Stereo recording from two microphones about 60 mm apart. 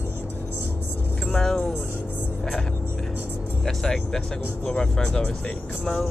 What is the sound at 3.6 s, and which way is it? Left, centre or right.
Music, centre.